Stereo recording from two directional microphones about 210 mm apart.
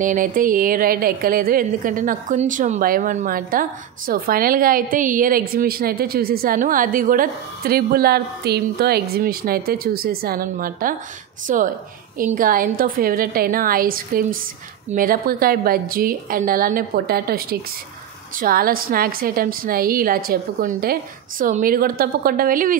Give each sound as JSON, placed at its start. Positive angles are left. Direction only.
{"t": 0.0, "sound": "a woman's voice", "side_deg": -40}